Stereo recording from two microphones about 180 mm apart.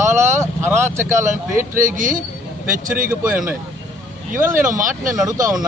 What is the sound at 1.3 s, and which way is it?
Speech, 50° right (ahead or behind).